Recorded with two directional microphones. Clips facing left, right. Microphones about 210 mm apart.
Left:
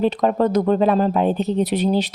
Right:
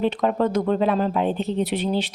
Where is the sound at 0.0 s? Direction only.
40° left (ahead or behind).